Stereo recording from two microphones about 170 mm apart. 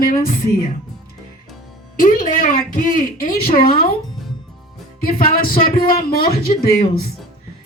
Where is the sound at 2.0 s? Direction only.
55° left (ahead or behind).